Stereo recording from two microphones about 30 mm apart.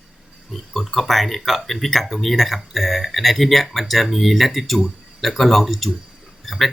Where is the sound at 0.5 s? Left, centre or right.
Centre.